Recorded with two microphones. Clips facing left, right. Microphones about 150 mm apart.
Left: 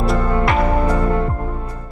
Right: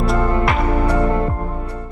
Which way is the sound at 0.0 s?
Centre (ahead or behind).